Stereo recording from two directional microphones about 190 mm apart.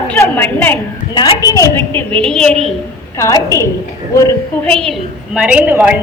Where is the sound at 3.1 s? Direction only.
15° left (ahead or behind).